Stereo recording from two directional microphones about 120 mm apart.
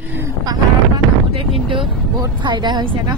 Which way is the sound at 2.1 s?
40° right (ahead or behind).